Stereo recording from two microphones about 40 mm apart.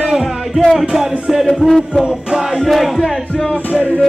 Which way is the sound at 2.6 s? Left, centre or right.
Centre.